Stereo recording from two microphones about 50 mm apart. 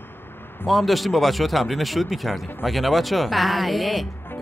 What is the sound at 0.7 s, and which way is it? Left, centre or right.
Speech, centre.